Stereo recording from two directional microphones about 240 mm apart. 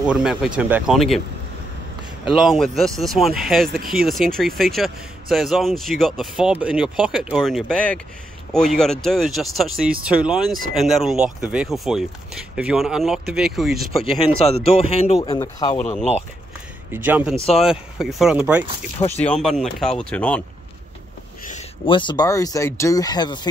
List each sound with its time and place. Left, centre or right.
0.0 s speech: centre
2.3 s speech: centre
14.4 s a man's voice: left
15.1 s speech: centre
16.9 s speech: centre
18.9 s a man's voice: left
19.2 s speech: centre
21.5 s speech: left